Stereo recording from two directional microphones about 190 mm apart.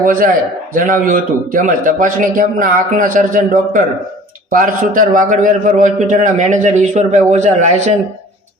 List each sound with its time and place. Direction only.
0.0 s a man's voice: 45° right (ahead or behind)